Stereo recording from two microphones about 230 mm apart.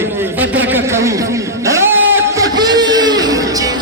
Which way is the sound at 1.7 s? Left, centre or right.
Centre.